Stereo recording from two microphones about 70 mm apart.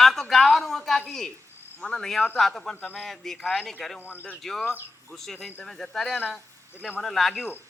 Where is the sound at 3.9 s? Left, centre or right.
Left.